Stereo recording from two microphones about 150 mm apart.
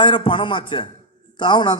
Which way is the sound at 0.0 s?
35° left (ahead or behind).